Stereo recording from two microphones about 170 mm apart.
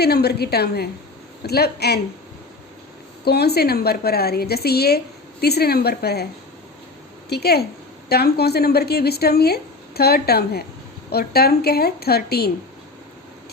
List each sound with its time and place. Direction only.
0.0 s speech: 70° left (ahead or behind)
3.2 s speech: 70° left (ahead or behind)
7.3 s speech: 70° left (ahead or behind)